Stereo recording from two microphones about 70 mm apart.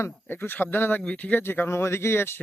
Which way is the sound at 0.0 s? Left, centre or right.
Left.